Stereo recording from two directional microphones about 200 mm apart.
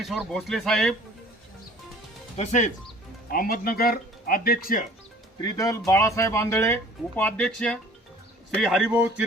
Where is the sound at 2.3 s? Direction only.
35° left (ahead or behind).